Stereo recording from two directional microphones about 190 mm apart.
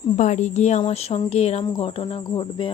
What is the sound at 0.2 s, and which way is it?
Speech, 40° left (ahead or behind).